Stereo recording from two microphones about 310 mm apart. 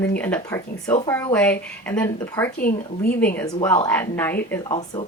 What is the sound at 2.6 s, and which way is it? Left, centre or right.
Speech, left.